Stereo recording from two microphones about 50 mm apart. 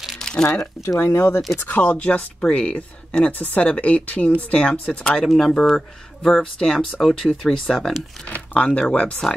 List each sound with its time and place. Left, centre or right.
0.2 s a sound: centre
0.8 s speech: left
1.7 s speech: left
5.7 s speech: centre
8.5 s speech: left